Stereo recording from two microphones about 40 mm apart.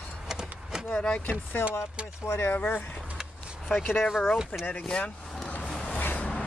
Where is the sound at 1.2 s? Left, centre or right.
Left.